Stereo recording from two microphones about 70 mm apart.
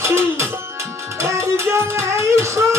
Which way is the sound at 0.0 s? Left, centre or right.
Right.